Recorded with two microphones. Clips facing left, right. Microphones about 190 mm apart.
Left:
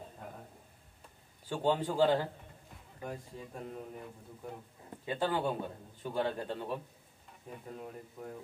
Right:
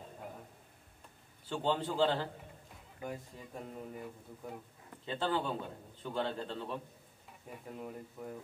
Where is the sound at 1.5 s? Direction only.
10° left (ahead or behind).